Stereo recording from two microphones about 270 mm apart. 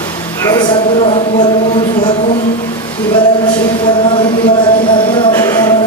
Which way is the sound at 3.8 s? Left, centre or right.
Centre.